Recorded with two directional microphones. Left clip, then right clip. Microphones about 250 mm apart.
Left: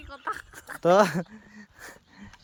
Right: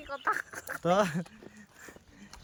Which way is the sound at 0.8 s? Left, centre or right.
Left.